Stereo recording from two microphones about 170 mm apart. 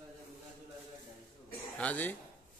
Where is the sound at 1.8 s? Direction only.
10° left (ahead or behind).